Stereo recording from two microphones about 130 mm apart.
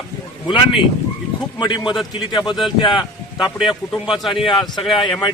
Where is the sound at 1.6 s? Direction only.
35° left (ahead or behind).